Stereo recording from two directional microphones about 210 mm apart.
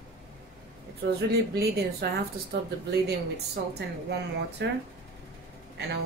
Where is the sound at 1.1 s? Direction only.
50° right (ahead or behind).